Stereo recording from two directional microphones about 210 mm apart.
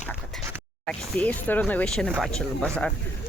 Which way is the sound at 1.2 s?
5° left (ahead or behind).